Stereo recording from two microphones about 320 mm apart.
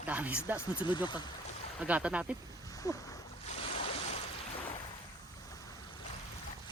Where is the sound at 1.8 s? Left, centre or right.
Centre.